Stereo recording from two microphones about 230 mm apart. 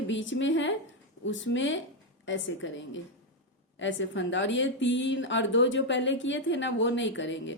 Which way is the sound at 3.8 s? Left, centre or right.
Left.